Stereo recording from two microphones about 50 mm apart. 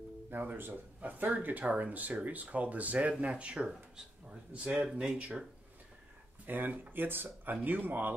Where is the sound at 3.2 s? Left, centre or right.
Right.